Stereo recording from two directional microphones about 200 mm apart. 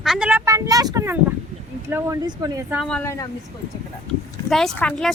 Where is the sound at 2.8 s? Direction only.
5° left (ahead or behind).